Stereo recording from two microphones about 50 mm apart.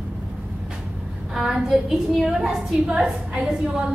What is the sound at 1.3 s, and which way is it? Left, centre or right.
A woman's voice, centre.